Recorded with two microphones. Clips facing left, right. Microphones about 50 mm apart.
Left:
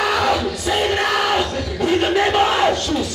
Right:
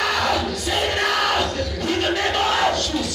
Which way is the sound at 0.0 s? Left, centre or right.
Centre.